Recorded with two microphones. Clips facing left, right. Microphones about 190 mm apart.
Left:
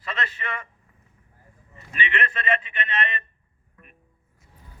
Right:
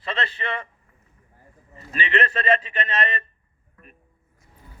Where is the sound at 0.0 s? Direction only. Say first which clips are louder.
Right 3 dB; 30° right (ahead or behind).